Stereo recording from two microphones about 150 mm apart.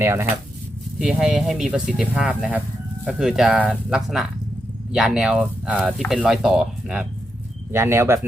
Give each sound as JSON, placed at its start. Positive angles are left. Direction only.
{"t": 0.0, "sound": "speech", "side_deg": -15}
{"t": 0.9, "sound": "speech", "side_deg": -5}
{"t": 7.7, "sound": "speech", "side_deg": -15}